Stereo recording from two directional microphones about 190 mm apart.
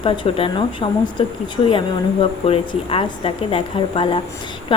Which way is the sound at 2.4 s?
30° left (ahead or behind).